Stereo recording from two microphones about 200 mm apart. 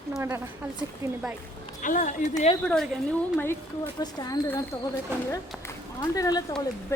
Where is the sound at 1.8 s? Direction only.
40° left (ahead or behind).